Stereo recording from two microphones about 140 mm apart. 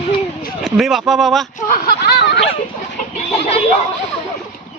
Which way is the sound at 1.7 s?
90° left.